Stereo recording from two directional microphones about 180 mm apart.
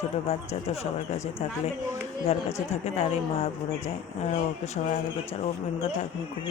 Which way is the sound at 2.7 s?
40° left (ahead or behind).